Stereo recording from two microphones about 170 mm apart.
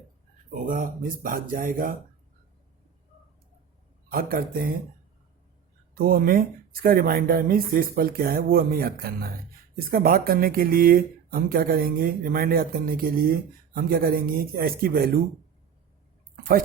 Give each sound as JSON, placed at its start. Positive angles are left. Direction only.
{"t": 0.5, "sound": "speech", "side_deg": -55}
{"t": 4.1, "sound": "speech", "side_deg": -55}
{"t": 5.9, "sound": "speech", "side_deg": -60}